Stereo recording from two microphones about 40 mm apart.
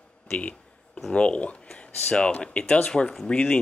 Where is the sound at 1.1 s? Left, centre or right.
Left.